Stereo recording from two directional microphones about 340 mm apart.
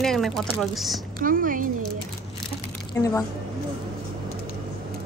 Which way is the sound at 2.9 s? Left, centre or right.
Centre.